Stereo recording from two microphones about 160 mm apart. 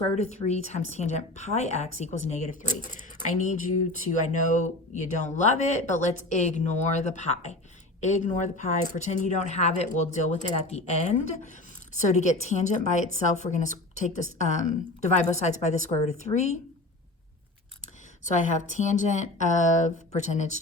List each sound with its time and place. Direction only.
0.2 s speech: 45° left (ahead or behind)
18.3 s speech: 50° left (ahead or behind)